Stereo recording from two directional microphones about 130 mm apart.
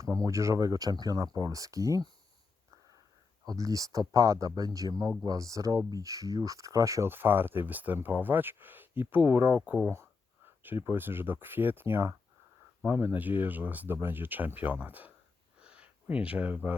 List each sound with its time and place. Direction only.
0.0 s speech: 25° right (ahead or behind)
3.4 s speech: 25° right (ahead or behind)
15.6 s a sound: 10° right (ahead or behind)